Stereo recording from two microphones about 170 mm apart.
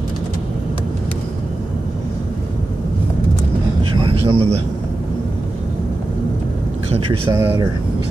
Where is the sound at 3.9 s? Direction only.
30° right (ahead or behind).